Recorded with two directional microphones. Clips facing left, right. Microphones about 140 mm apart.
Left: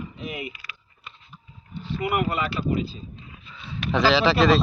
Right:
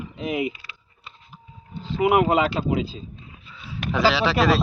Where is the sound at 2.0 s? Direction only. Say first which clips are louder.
Right 7 dB; 90° right.